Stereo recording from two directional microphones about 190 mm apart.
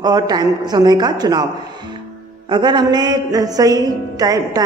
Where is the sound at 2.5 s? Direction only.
25° right (ahead or behind).